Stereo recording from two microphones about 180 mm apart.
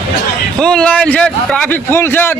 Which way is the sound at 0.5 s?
5° left (ahead or behind).